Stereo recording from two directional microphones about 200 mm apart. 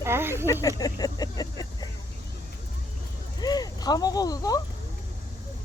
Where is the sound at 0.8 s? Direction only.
20° left (ahead or behind).